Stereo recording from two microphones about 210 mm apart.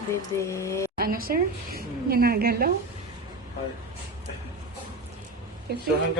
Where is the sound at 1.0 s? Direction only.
45° right (ahead or behind).